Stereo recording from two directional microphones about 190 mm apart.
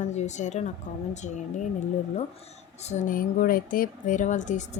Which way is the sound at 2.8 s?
40° left (ahead or behind).